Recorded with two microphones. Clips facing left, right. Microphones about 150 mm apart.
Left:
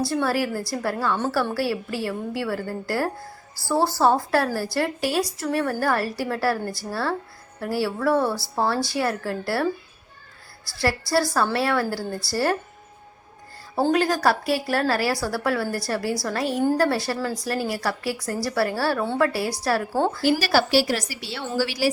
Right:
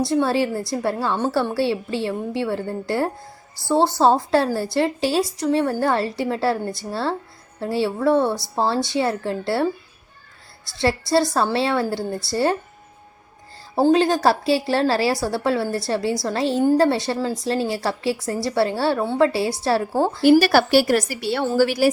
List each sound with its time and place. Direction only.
0.0 s a woman's voice: 25° right (ahead or behind)
10.7 s a woman's voice: 20° right (ahead or behind)
13.9 s a woman's voice: 25° right (ahead or behind)
20.4 s a woman's voice: 55° right (ahead or behind)